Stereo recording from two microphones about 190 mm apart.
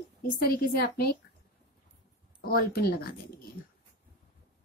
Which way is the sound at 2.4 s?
55° left (ahead or behind).